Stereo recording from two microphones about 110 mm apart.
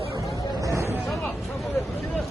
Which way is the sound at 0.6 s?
25° right (ahead or behind).